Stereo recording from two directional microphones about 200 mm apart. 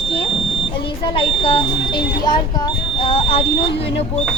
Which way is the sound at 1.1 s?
25° left (ahead or behind).